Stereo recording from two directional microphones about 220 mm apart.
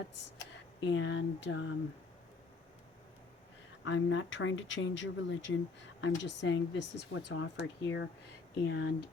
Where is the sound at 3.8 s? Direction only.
60° left (ahead or behind).